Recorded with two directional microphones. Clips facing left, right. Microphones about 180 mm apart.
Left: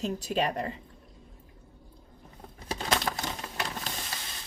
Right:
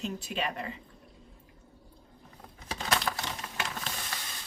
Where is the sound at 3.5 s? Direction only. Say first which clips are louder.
Even; 35° left (ahead or behind).